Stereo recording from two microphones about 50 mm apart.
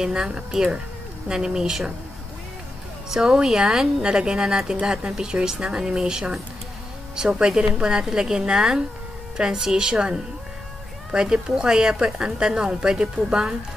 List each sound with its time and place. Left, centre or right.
0.0 s a woman's voice: centre
3.1 s a woman's voice: centre